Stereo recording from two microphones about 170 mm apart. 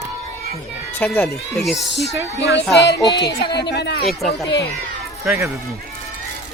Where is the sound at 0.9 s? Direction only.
10° left (ahead or behind).